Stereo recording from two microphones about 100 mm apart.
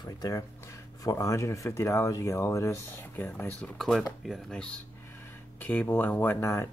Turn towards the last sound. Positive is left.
turn(degrees=25)  # may be behind; listen again after turning